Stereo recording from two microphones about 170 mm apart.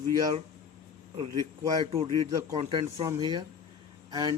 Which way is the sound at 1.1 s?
30° right (ahead or behind).